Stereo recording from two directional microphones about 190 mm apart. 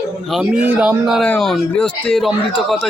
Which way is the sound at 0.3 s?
5° right (ahead or behind).